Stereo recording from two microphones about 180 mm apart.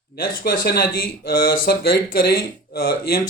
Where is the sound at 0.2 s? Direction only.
55° left (ahead or behind).